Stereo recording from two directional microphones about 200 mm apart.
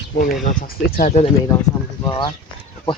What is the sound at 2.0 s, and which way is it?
Speech, 20° left (ahead or behind).